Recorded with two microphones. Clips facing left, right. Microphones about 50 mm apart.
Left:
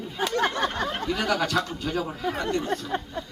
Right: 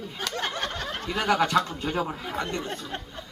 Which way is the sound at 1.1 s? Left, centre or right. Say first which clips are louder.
Right 4 dB; centre.